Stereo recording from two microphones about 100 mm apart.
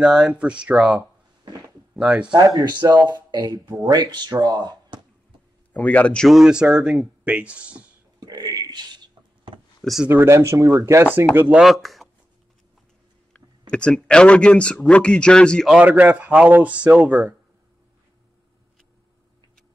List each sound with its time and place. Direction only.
0.0 s speech: 5° right (ahead or behind)
2.3 s speech: 45° right (ahead or behind)
5.7 s speech: 15° left (ahead or behind)
6.2 s speech: 5° right (ahead or behind)
8.2 s a sound: 40° right (ahead or behind)
9.8 s a sound: centre (ahead or behind)
10.0 s speech: 25° right (ahead or behind)
11.5 s speech: centre (ahead or behind)
13.3 s speech: 10° left (ahead or behind)
15.7 s speech: 15° right (ahead or behind)